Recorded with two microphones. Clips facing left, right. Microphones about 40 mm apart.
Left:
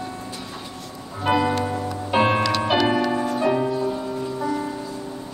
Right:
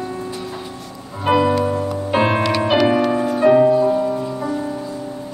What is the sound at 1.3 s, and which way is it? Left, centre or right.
Music, centre.